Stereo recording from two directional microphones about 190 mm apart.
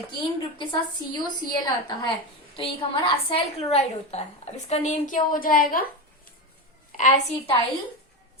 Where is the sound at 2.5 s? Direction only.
30° left (ahead or behind); by 5.8 s 50° left (ahead or behind).